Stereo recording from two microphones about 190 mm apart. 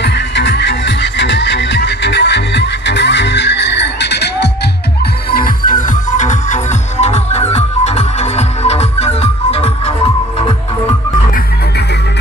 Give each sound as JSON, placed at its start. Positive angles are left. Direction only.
{"t": 0.0, "sound": "music", "side_deg": 65}
{"t": 5.3, "sound": "music", "side_deg": 45}